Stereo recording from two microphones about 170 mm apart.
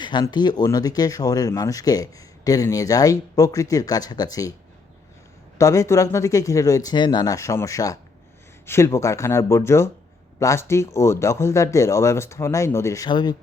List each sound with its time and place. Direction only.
0.0 s speech: 25° left (ahead or behind)
5.5 s speech: 20° left (ahead or behind)